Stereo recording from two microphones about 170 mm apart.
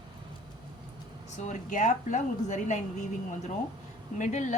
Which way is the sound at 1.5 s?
45° left (ahead or behind).